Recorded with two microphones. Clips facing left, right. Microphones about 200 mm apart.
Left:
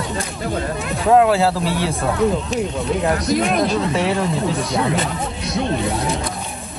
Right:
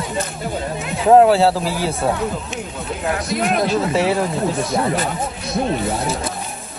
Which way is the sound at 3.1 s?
40° left (ahead or behind).